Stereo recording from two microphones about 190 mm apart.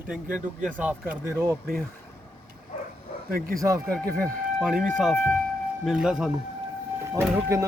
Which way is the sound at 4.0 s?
Centre (ahead or behind).